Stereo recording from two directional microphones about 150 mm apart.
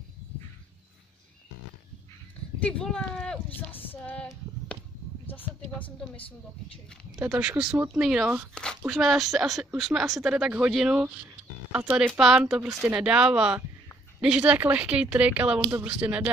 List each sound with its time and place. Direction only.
2.6 s speech: 5° left (ahead or behind)
3.9 s female singing: 10° left (ahead or behind)
5.9 s female singing: 10° left (ahead or behind)
7.2 s a woman's voice: 10° right (ahead or behind)
8.5 s a woman's voice: 5° left (ahead or behind)